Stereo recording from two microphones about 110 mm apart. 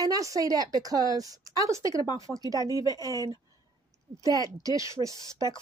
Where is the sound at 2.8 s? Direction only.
30° left (ahead or behind).